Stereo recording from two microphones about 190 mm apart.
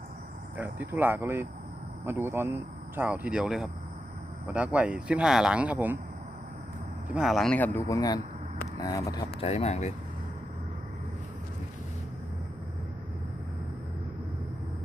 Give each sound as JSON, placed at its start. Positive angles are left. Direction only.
{"t": 0.5, "sound": "speech", "side_deg": -10}
{"t": 7.1, "sound": "speech", "side_deg": -5}
{"t": 9.4, "sound": "speech", "side_deg": 35}